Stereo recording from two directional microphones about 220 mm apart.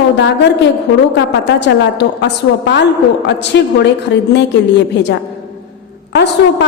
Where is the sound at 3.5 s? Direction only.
50° left (ahead or behind).